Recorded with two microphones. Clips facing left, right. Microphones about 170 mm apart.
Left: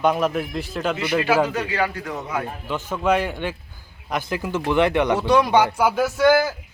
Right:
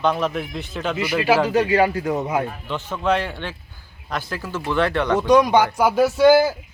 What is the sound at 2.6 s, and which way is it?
A man's voice, 10° left (ahead or behind).